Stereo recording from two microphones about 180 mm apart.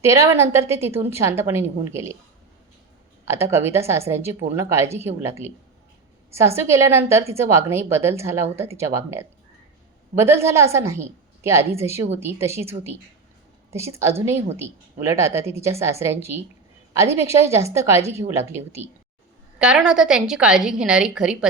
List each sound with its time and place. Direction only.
0.0 s a woman's voice: 15° right (ahead or behind)
3.2 s a woman's voice: 15° right (ahead or behind)
6.6 s a woman's voice: 15° right (ahead or behind)